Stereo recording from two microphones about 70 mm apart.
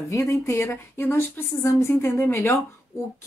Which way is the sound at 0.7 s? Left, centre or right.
Left.